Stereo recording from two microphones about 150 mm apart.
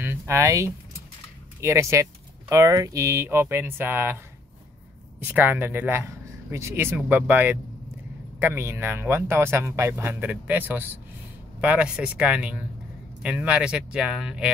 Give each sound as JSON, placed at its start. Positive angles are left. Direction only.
{"t": 0.0, "sound": "a sound", "side_deg": -15}
{"t": 1.6, "sound": "speech", "side_deg": -20}
{"t": 5.2, "sound": "speech", "side_deg": -10}